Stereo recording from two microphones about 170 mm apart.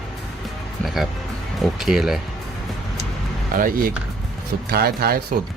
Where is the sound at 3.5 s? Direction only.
55° right (ahead or behind).